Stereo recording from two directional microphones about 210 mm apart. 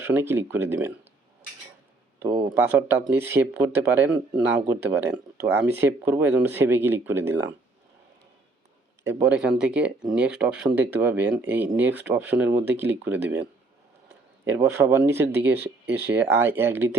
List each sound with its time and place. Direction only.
0.0 s speech: 10° right (ahead or behind)
2.3 s speech: 25° right (ahead or behind)
3.1 s speech: 10° right (ahead or behind)
9.0 s speech: 10° right (ahead or behind)